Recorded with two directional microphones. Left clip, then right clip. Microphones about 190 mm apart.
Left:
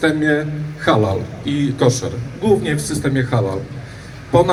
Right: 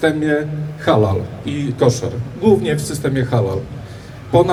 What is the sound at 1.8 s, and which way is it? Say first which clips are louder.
A man's voice: right 3 dB; 25° right (ahead or behind).